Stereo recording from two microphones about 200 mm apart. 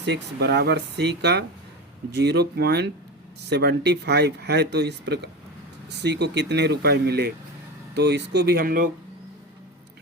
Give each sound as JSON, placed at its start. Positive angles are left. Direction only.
{"t": 0.0, "sound": "speech", "side_deg": -55}